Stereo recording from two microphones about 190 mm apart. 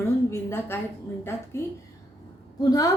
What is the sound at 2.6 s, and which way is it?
Speech, 20° left (ahead or behind).